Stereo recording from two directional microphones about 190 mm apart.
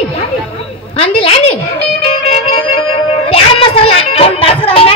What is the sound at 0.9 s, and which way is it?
Music, 30° left (ahead or behind).